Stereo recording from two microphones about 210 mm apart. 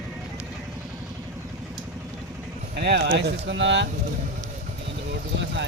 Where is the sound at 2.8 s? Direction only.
55° right (ahead or behind).